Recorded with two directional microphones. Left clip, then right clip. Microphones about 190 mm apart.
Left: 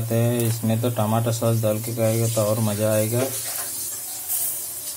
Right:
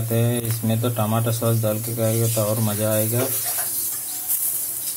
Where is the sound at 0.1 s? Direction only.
Centre (ahead or behind).